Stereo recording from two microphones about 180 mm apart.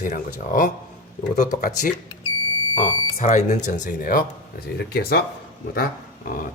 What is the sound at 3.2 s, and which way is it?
Speech, 40° left (ahead or behind).